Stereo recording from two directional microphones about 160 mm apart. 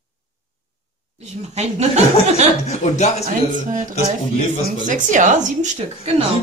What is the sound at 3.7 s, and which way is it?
A woman's voice, 55° right (ahead or behind).